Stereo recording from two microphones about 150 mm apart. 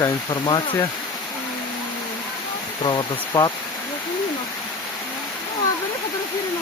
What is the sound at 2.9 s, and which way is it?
Speech, 25° left (ahead or behind).